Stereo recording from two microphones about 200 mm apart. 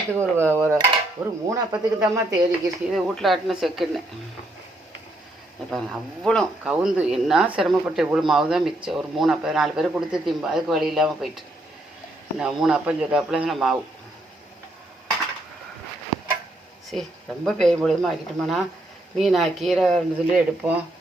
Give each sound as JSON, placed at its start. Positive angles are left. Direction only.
{"t": 0.2, "sound": "speech", "side_deg": -10}
{"t": 2.9, "sound": "speech", "side_deg": 0}
{"t": 5.7, "sound": "speech", "side_deg": 0}
{"t": 16.9, "sound": "speech", "side_deg": 0}